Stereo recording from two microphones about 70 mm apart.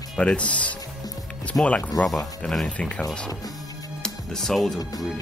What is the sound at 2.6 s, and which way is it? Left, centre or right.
Speech, centre.